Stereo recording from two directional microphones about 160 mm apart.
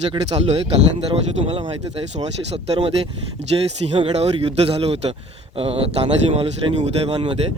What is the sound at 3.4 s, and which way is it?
Speech, 90° right.